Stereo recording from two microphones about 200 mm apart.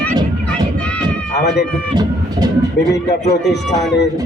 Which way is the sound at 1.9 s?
20° right (ahead or behind).